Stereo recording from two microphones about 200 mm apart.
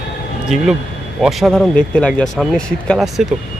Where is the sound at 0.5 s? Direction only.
Centre (ahead or behind).